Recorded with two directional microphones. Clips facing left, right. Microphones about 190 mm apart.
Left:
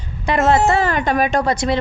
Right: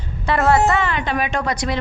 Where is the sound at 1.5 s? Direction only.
25° left (ahead or behind).